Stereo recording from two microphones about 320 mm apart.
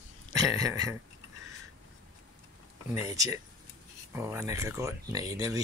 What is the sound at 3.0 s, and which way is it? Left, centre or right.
Speech, centre.